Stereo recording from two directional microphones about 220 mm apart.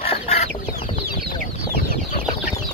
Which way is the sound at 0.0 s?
25° left (ahead or behind).